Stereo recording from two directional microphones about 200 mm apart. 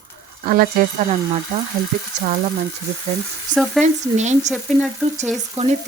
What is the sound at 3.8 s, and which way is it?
Speech, 35° right (ahead or behind).